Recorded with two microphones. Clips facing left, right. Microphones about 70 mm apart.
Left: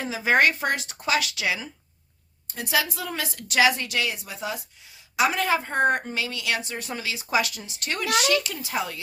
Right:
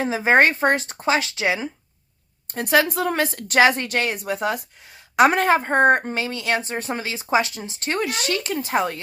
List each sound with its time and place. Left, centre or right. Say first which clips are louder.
0.0 s speech: right 4 dB; right
2.5 s speech: right 7 dB; right